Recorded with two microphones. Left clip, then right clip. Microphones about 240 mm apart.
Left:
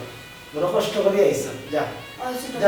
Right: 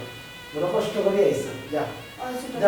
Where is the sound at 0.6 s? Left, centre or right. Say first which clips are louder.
Left 3 dB; centre.